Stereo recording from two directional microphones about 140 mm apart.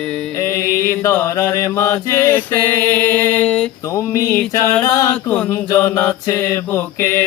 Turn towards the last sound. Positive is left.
turn(degrees=15)  # may be behind; listen again after turning